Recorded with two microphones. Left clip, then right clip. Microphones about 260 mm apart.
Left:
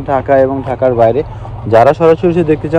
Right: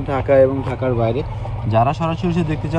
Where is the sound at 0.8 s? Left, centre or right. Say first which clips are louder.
Left 11 dB; left.